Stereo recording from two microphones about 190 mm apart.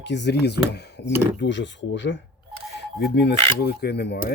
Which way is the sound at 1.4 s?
70° left (ahead or behind).